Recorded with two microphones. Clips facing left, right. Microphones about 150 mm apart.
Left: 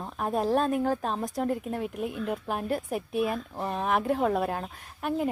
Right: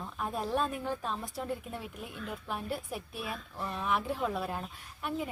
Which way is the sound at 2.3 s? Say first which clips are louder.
Left 4 dB; 55° left (ahead or behind).